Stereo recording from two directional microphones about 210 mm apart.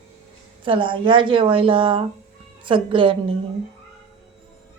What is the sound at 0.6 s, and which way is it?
Speech, 25° right (ahead or behind).